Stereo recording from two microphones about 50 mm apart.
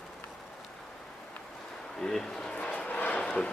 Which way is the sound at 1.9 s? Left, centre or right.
Centre.